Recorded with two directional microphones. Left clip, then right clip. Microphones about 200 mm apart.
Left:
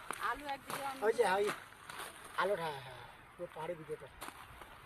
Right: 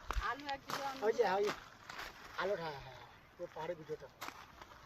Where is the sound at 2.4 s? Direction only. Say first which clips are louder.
Left 4 dB; 40° left (ahead or behind).